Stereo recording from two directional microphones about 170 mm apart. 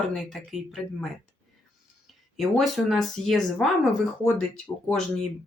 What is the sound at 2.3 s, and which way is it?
Speech, centre (ahead or behind).